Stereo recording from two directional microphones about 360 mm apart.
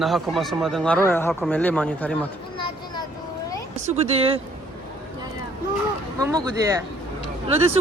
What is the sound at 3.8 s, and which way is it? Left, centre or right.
Speech, centre.